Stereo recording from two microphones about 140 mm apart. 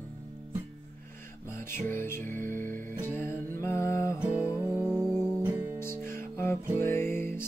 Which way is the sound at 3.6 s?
20° left (ahead or behind).